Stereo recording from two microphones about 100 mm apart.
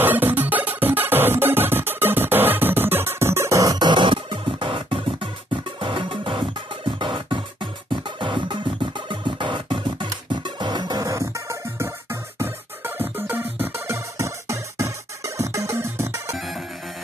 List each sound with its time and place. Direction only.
0.0 s music: 20° right (ahead or behind)
16.3 s music: centre (ahead or behind)